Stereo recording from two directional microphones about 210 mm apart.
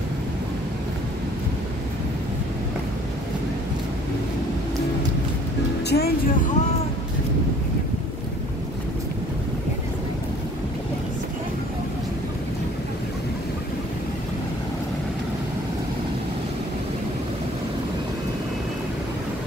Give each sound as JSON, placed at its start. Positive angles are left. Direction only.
{"t": 5.9, "sound": "music", "side_deg": 50}